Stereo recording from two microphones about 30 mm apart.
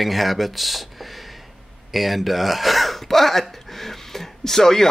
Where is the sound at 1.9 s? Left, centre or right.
Centre.